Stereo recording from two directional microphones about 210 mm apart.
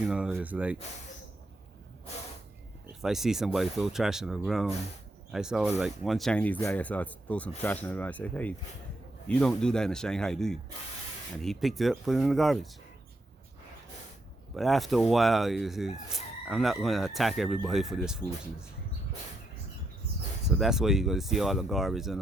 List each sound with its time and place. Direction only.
0.1 s speech: 5° right (ahead or behind)
3.0 s speech: centre (ahead or behind)
14.5 s speech: centre (ahead or behind)
20.6 s speech: centre (ahead or behind)